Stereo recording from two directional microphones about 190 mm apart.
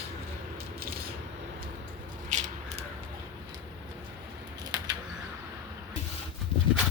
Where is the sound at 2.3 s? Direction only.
40° right (ahead or behind).